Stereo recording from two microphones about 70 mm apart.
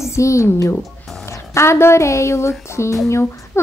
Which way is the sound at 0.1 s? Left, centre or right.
Left.